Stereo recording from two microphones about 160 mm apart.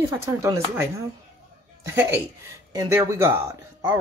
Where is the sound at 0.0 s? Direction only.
20° right (ahead or behind).